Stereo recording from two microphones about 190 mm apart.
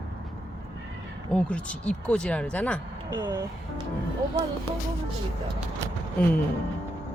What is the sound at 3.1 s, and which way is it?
Speech, 15° right (ahead or behind).